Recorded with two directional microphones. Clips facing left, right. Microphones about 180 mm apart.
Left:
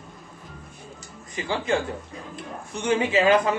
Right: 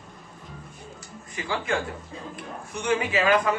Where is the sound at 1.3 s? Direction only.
25° left (ahead or behind).